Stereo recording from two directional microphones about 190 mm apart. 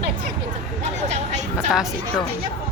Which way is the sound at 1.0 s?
35° right (ahead or behind).